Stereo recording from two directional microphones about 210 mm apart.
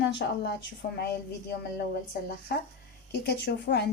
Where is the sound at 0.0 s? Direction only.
60° left (ahead or behind).